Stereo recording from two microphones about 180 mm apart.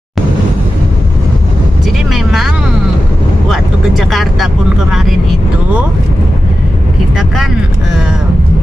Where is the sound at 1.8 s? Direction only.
Centre (ahead or behind).